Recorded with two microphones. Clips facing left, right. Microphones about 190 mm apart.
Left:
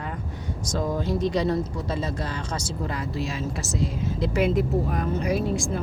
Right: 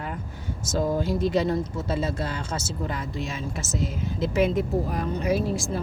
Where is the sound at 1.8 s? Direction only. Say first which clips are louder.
Right 1 dB; 25° right (ahead or behind).